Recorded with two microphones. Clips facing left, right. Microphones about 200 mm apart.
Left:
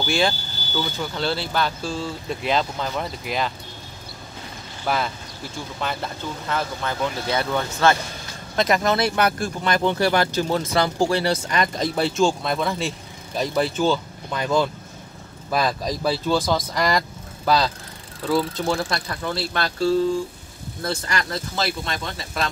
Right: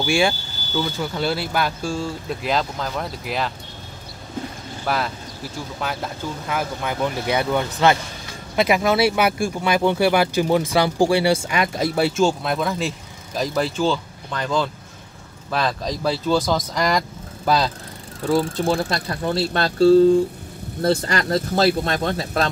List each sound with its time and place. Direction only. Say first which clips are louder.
0.0 s speech: right 2 dB; 10° right (ahead or behind)
4.8 s speech: even; centre (ahead or behind)
18.6 s speech: right 3 dB; 35° right (ahead or behind)